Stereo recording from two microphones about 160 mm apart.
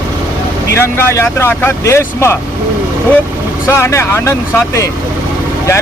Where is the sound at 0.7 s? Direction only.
15° left (ahead or behind).